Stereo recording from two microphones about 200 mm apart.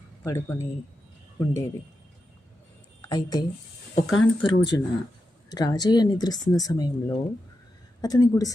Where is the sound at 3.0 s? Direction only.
20° left (ahead or behind).